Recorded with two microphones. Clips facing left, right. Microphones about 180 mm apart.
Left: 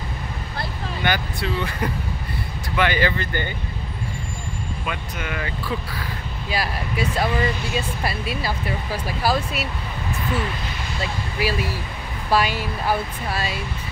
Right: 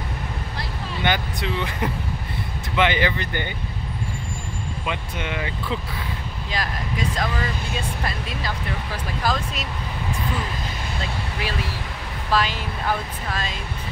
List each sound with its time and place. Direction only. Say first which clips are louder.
1.0 s speech: even; 20° right (ahead or behind)
4.8 s speech: right 2 dB; 20° right (ahead or behind)
6.5 s speech: left 3 dB; 10° left (ahead or behind)
11.4 s speech: left 7 dB; 10° left (ahead or behind)